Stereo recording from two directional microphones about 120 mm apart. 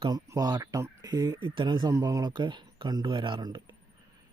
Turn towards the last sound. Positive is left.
turn(degrees=-40)  # may be behind; listen again after turning